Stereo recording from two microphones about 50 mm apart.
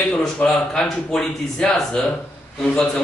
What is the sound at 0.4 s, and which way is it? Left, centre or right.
Speech, left.